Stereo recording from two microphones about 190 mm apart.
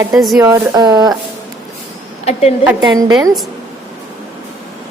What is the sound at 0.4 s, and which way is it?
Speech, 20° right (ahead or behind).